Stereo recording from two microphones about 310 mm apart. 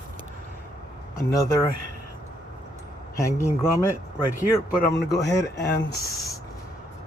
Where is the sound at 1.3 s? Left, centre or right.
Centre.